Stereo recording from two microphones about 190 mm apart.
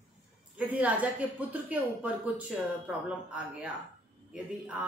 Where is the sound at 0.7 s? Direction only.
10° right (ahead or behind).